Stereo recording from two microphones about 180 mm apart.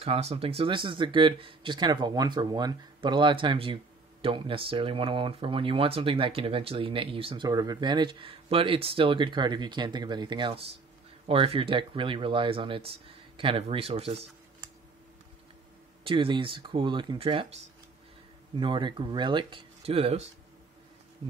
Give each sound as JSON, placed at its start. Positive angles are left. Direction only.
{"t": 0.0, "sound": "speech", "side_deg": -35}
{"t": 16.0, "sound": "speech", "side_deg": -30}
{"t": 18.6, "sound": "speech", "side_deg": -25}